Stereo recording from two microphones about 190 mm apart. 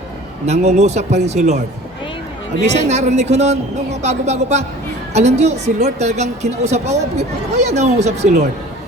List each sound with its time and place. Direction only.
0.4 s a woman's voice: 35° right (ahead or behind)
2.6 s a woman's voice: 35° right (ahead or behind)